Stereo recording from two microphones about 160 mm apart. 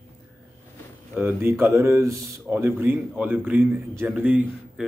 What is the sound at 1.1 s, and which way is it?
Speech, 10° right (ahead or behind).